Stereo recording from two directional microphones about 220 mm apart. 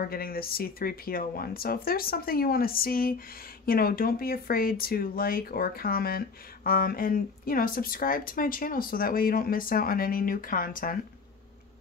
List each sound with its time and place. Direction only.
0.0 s speech: 45° left (ahead or behind)